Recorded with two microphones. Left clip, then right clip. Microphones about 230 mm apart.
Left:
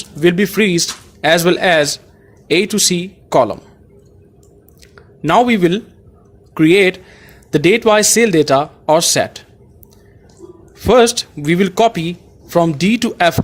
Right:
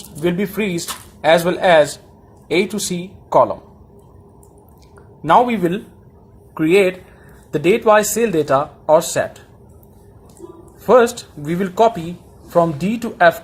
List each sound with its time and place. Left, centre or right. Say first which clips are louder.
0.2 s speech: left 7 dB; left
5.2 s speech: left 2 dB; left
10.8 s speech: left 2 dB; left